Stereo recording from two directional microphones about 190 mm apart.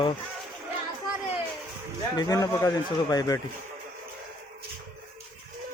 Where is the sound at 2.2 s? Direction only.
20° left (ahead or behind).